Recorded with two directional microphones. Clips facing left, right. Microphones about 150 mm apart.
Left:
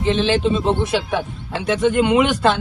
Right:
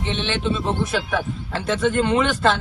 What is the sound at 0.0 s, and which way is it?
Speech, 35° left (ahead or behind).